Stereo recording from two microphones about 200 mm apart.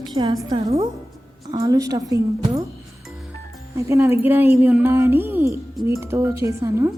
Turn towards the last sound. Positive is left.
turn(degrees=-15)  # may be behind; listen again after turning